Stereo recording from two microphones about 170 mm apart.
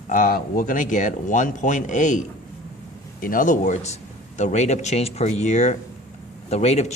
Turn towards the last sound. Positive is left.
turn(degrees=40)  # may be behind; listen again after turning